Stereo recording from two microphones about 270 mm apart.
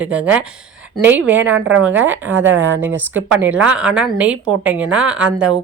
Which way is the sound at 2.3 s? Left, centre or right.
Right.